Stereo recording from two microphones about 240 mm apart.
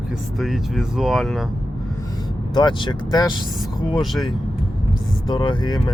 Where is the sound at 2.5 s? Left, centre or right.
Centre.